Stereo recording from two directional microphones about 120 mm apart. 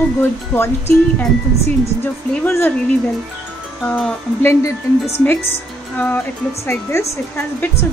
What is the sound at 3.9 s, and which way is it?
Speech, 10° left (ahead or behind).